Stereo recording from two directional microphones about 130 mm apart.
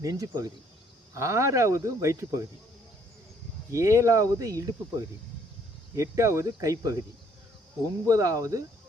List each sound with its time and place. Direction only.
0.0 s speech: 25° right (ahead or behind)
3.7 s speech: 25° right (ahead or behind)
8.0 s speech: 25° right (ahead or behind)